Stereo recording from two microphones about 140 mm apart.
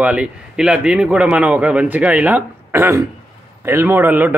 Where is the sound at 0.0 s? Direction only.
10° right (ahead or behind).